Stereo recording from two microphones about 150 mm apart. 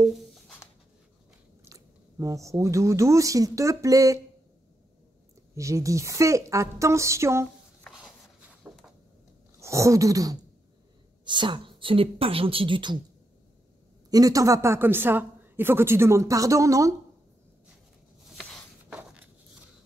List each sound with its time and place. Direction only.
0.0 s writing: centre (ahead or behind)
1.6 s speech: 20° right (ahead or behind)
5.5 s speech: 20° right (ahead or behind)
7.9 s writing: 5° right (ahead or behind)
9.6 s a sound: 20° right (ahead or behind)
11.2 s speech: 30° right (ahead or behind)
14.1 s speech: 25° right (ahead or behind)
18.4 s a sound: 5° left (ahead or behind)